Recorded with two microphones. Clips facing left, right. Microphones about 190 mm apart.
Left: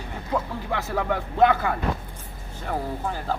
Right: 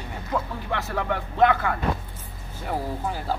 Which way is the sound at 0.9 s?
10° left (ahead or behind).